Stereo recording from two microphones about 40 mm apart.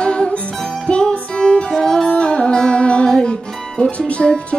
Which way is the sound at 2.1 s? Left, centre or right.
Left.